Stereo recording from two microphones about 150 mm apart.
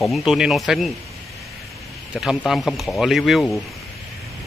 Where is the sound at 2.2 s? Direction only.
Centre (ahead or behind).